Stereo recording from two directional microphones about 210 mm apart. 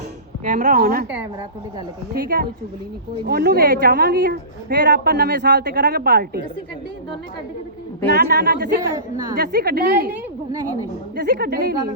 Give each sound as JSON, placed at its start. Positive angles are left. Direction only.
{"t": 0.4, "sound": "a woman's voice", "side_deg": -40}
{"t": 2.2, "sound": "a woman's voice", "side_deg": -45}
{"t": 8.1, "sound": "a woman's voice", "side_deg": -50}
{"t": 9.0, "sound": "a woman's voice", "side_deg": -20}
{"t": 9.4, "sound": "a woman's voice", "side_deg": -50}
{"t": 10.5, "sound": "a woman's voice", "side_deg": -15}
{"t": 11.2, "sound": "a woman's voice", "side_deg": -50}